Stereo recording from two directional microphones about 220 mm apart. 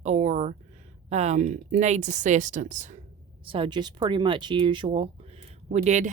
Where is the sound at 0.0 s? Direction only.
30° right (ahead or behind).